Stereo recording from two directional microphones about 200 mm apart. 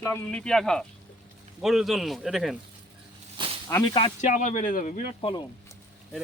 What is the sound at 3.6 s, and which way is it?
Speech, 15° left (ahead or behind).